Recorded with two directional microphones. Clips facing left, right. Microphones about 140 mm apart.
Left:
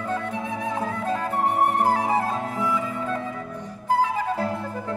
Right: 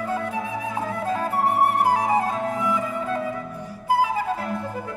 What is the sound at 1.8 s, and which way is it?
Flute, 15° right (ahead or behind).